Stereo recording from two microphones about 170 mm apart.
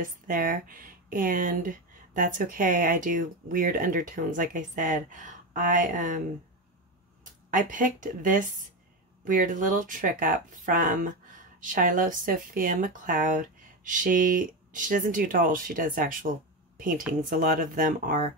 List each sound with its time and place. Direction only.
0.0 s speech: 55° right (ahead or behind)
7.5 s a woman's voice: 50° right (ahead or behind)